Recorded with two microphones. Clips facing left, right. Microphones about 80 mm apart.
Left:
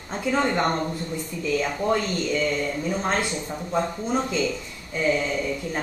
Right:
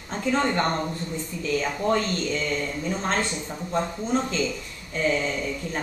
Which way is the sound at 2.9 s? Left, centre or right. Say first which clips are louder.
Even; centre.